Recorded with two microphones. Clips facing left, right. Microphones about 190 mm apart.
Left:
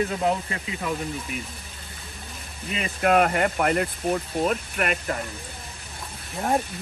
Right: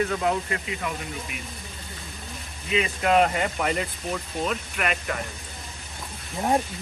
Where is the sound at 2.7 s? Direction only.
50° left (ahead or behind).